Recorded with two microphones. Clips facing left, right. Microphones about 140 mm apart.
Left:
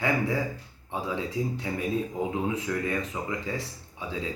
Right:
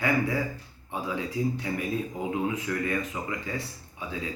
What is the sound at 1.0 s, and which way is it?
Speech, 25° left (ahead or behind).